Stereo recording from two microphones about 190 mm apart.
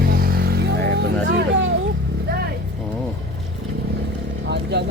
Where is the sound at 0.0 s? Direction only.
50° right (ahead or behind).